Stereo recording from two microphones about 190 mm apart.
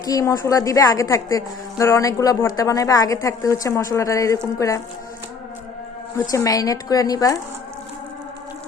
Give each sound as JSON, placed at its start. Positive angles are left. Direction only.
{"t": 0.0, "sound": "a woman's voice", "side_deg": 20}
{"t": 6.3, "sound": "a woman's voice", "side_deg": 15}